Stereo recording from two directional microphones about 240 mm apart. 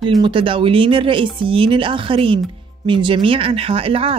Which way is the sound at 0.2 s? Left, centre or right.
Right.